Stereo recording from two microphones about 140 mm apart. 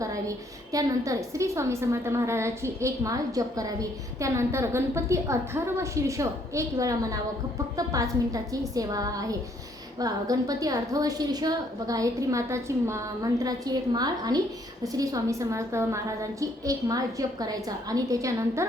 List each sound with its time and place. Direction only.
0.0 s a woman's voice: 25° right (ahead or behind)